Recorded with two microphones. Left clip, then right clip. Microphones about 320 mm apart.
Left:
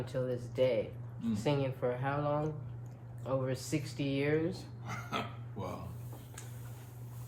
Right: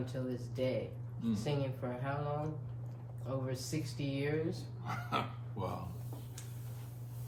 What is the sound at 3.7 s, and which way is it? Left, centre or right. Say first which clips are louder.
Speech: left 5 dB; left.